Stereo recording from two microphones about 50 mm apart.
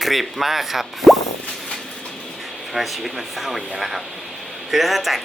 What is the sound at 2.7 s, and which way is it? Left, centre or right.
Speech, centre.